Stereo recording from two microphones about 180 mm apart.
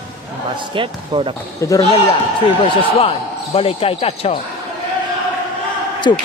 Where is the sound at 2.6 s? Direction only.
30° left (ahead or behind).